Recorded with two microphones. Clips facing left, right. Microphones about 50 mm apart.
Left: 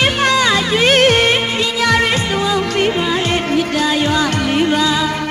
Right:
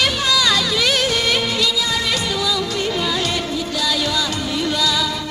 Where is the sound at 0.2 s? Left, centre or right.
Left.